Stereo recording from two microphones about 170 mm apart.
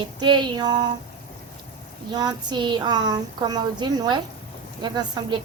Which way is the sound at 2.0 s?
25° right (ahead or behind).